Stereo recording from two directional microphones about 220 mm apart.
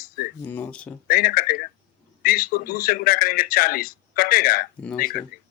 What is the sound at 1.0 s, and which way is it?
Speech, 40° left (ahead or behind).